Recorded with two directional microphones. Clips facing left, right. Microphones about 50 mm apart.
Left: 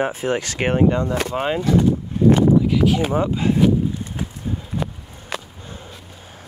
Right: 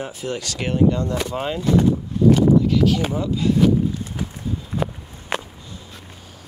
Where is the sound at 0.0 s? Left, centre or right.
Left.